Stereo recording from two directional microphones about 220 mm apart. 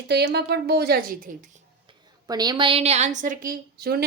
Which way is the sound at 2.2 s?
20° right (ahead or behind).